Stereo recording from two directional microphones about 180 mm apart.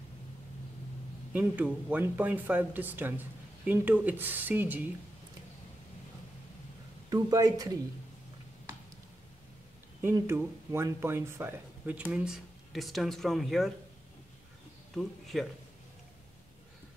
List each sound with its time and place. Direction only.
1.3 s speech: 10° right (ahead or behind)
7.1 s speech: 20° right (ahead or behind)
10.0 s speech: 15° right (ahead or behind)
15.0 s speech: centre (ahead or behind)